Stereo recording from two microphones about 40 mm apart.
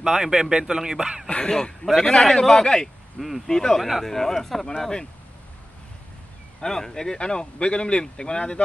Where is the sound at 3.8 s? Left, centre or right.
Centre.